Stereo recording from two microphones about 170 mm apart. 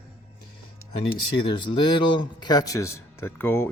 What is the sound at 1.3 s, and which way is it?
A man's voice, 30° left (ahead or behind).